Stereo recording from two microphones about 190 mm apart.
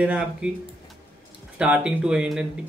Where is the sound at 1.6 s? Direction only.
5° right (ahead or behind).